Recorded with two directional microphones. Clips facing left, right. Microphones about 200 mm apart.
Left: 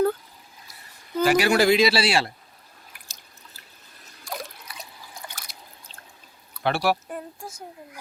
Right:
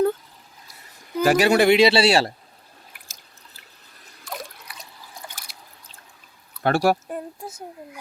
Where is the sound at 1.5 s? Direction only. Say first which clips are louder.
Right 3 dB; 25° right (ahead or behind).